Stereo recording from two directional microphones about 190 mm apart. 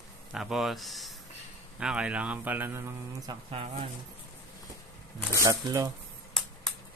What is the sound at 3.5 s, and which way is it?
Speech, 30° right (ahead or behind).